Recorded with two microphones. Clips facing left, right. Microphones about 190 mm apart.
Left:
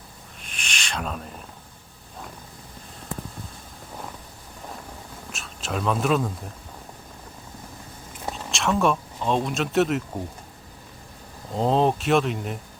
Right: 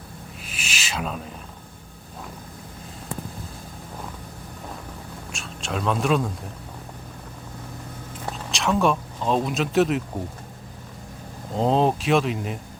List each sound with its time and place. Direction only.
0.4 s a sound: 5° right (ahead or behind)
5.3 s speech: centre (ahead or behind)
8.3 s speech: centre (ahead or behind)
11.5 s speech: centre (ahead or behind)